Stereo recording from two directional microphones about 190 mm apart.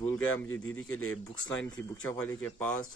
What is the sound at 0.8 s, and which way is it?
Speech, 90° left.